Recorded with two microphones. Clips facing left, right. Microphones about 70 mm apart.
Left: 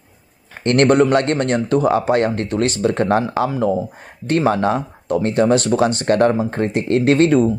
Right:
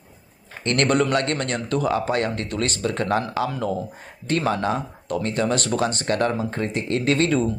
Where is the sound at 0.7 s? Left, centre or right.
Left.